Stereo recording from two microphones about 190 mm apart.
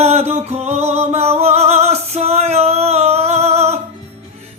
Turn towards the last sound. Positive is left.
turn(degrees=-35)  # may be behind; listen again after turning